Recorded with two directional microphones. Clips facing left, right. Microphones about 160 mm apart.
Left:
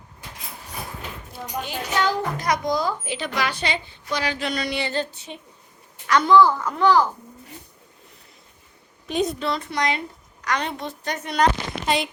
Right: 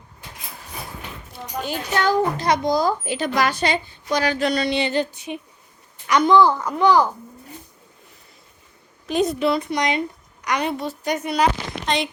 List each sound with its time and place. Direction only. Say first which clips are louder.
1.6 s speech: right 3 dB; 50° right (ahead or behind)
2.4 s speech: right 4 dB; 30° right (ahead or behind)
4.6 s a woman's voice: right 5 dB; 20° right (ahead or behind)
9.0 s a woman's voice: right 3 dB; centre (ahead or behind)
9.4 s a woman's voice: right 4 dB; 15° right (ahead or behind)